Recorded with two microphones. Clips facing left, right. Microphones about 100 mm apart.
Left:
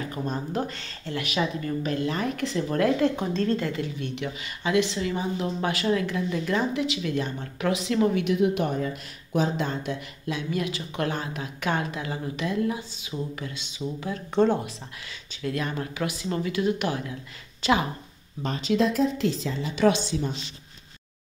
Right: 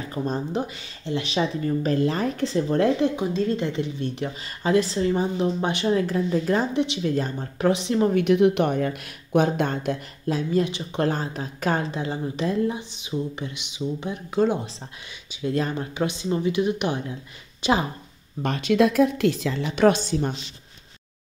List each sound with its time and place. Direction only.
0.1 s a woman's voice: 30° right (ahead or behind)
0.6 s speech: 10° right (ahead or behind)
1.1 s a woman's voice: 30° right (ahead or behind)
3.2 s speech: 10° right (ahead or behind)
3.6 s a woman's voice: 25° right (ahead or behind)
8.1 s a woman's voice: 50° right (ahead or behind)
10.2 s a woman's voice: 35° right (ahead or behind)
14.3 s speech: 5° right (ahead or behind)
15.4 s a woman's voice: 25° right (ahead or behind)
18.4 s a woman's voice: 65° right (ahead or behind)